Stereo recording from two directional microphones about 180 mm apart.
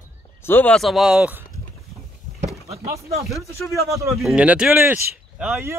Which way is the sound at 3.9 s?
15° right (ahead or behind).